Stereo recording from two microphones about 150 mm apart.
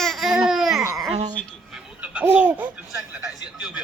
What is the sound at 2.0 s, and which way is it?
Laughter, 10° right (ahead or behind).